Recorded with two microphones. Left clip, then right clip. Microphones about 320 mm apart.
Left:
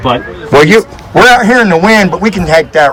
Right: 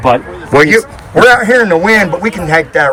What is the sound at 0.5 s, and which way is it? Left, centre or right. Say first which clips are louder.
A man's voice: left 2 dB; centre.